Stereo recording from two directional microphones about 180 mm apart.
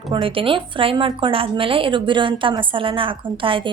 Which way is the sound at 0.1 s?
30° right (ahead or behind).